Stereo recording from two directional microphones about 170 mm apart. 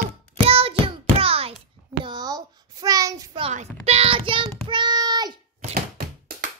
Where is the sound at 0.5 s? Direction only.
35° right (ahead or behind).